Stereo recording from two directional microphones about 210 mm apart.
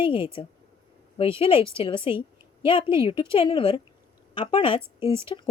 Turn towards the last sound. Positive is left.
turn(degrees=25)  # may be behind; listen again after turning